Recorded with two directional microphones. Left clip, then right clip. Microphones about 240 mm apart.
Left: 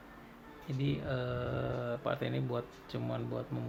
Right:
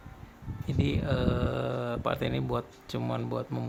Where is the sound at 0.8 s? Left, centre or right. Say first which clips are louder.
Right 6 dB; right.